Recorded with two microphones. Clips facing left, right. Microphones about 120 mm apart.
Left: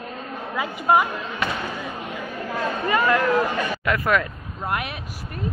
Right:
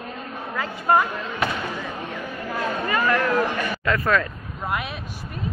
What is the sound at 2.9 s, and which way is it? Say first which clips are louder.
Speech: left 3 dB; 20° left (ahead or behind).